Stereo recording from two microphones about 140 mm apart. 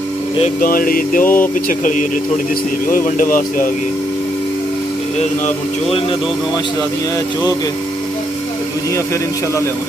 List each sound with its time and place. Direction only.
0.6 s a sound: 90° left
1.2 s speech: 15° left (ahead or behind)
1.7 s speech: 65° left (ahead or behind)